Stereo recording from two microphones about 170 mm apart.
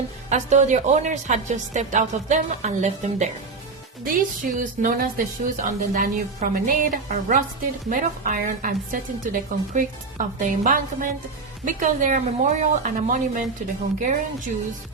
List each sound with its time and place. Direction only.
0.3 s a woman's voice: 45° right (ahead or behind)